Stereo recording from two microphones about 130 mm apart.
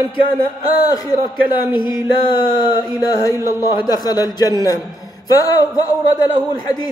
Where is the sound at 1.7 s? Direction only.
35° left (ahead or behind).